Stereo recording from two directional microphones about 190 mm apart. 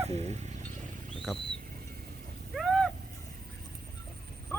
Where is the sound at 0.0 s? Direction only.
35° right (ahead or behind).